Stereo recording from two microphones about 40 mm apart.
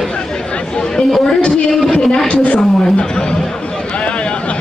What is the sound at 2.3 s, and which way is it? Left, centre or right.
Speech, left.